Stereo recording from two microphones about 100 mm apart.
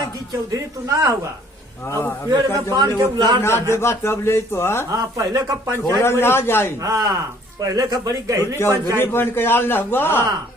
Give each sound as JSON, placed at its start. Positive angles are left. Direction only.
{"t": 0.9, "sound": "a man's voice", "side_deg": -30}
{"t": 1.9, "sound": "a man's voice", "side_deg": 25}
{"t": 3.2, "sound": "a man's voice", "side_deg": -45}
{"t": 3.4, "sound": "a man's voice", "side_deg": 25}
{"t": 4.9, "sound": "a man's voice", "side_deg": -35}
{"t": 5.7, "sound": "a man's voice", "side_deg": 25}
{"t": 6.8, "sound": "a man's voice", "side_deg": -35}
{"t": 9.0, "sound": "a man's voice", "side_deg": 20}